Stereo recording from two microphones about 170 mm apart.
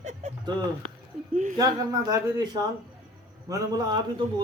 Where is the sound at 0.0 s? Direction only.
40° right (ahead or behind).